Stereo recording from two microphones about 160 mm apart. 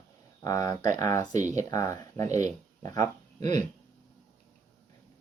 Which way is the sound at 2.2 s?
50° right (ahead or behind).